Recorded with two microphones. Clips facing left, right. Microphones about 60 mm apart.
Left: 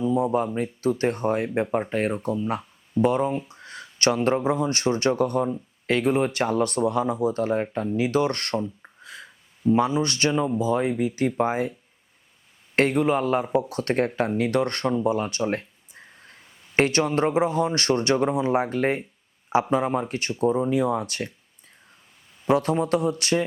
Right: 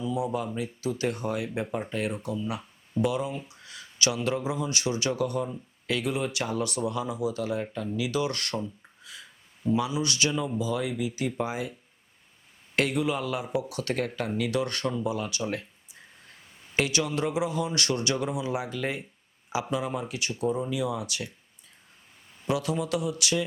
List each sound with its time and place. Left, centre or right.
0.0 s a sound: left
0.3 s speech: left
8.5 s speech: left
9.0 s a sound: left
9.7 s speech: left
12.7 s speech: left
16.7 s speech: left
22.4 s speech: left